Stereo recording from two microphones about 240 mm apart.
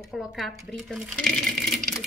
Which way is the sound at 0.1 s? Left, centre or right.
Centre.